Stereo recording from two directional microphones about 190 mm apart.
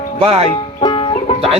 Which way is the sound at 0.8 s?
30° left (ahead or behind).